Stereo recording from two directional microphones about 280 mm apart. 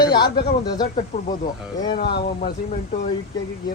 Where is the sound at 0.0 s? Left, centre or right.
Centre.